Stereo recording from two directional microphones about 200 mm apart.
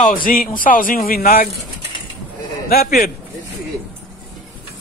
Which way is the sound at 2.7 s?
50° left (ahead or behind).